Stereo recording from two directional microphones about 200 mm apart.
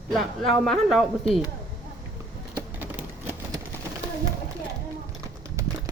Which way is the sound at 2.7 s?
10° right (ahead or behind).